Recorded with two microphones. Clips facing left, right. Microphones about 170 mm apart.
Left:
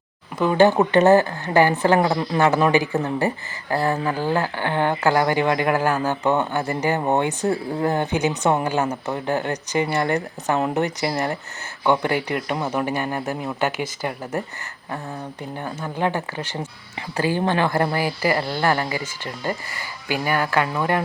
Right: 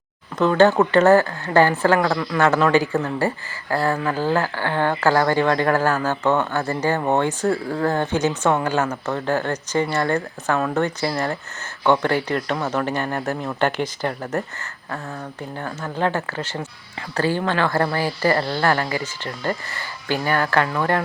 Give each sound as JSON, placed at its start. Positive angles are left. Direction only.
{"t": 0.3, "sound": "speech", "side_deg": 15}
{"t": 15.5, "sound": "speech", "side_deg": 15}